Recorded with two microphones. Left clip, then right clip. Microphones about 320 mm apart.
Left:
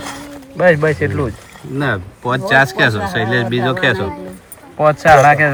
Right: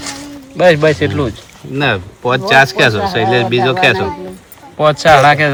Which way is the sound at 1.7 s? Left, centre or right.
Right.